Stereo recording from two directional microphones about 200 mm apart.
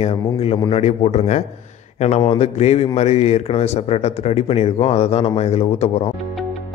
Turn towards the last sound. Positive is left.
turn(degrees=30)  # may be behind; listen again after turning